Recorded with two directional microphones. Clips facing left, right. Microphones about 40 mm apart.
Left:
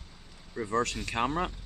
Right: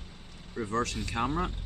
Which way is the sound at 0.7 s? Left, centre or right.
Left.